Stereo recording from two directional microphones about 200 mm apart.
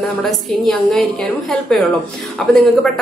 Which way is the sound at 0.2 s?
Centre (ahead or behind).